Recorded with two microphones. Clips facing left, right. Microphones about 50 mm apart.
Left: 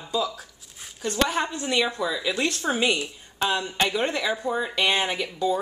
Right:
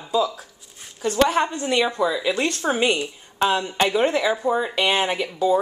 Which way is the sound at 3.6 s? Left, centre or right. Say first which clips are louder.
Right 4 dB; right.